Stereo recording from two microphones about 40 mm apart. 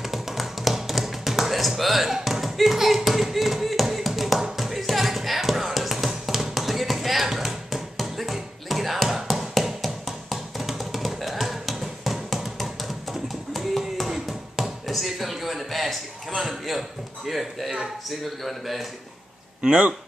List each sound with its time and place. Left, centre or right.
0.0 s tap: centre
1.8 s music: centre
12.5 s tap: centre
16.3 s a man's voice: centre
19.6 s speech: right